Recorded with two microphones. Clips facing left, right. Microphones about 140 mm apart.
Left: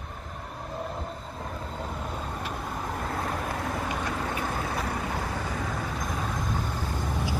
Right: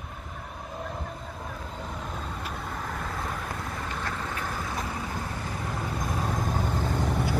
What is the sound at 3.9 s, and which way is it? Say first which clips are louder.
Vehicle: left 3 dB; 15° left (ahead or behind).